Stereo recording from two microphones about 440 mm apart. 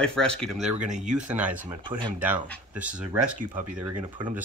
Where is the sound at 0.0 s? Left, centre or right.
Centre.